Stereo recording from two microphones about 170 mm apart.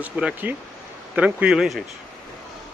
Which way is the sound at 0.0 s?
10° right (ahead or behind).